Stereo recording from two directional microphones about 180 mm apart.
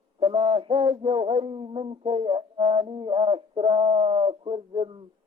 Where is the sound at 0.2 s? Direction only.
30° right (ahead or behind).